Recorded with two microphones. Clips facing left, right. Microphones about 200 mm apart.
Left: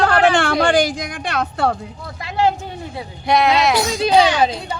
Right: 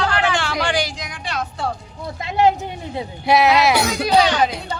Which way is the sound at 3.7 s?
65° right (ahead or behind).